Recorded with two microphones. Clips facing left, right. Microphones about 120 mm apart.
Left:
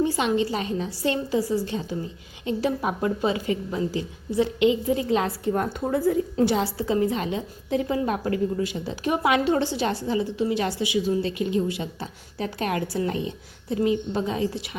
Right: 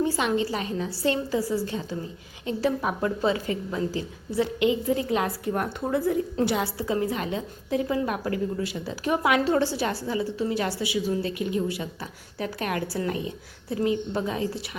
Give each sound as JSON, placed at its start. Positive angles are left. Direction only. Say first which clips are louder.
{"t": 0.0, "sound": "a woman's voice", "louder": "left 2 dB", "side_deg": 20}